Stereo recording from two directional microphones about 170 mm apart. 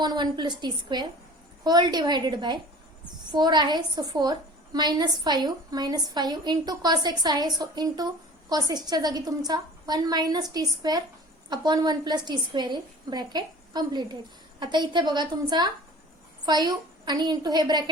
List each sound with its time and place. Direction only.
0.0 s a woman's voice: 25° right (ahead or behind)